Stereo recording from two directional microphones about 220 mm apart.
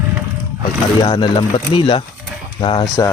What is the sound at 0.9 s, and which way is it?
Speech, 20° left (ahead or behind).